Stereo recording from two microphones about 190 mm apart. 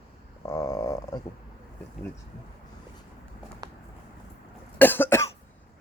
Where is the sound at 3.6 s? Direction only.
20° right (ahead or behind).